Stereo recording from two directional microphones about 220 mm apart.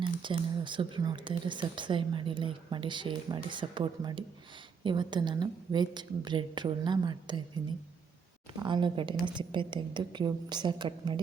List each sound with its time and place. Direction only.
0.0 s speech: 20° right (ahead or behind)
8.6 s speech: 20° right (ahead or behind)